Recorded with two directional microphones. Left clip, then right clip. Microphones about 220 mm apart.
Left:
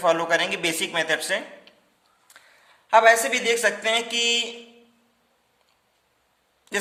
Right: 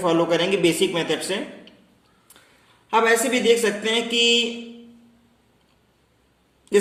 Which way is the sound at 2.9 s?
40° left (ahead or behind).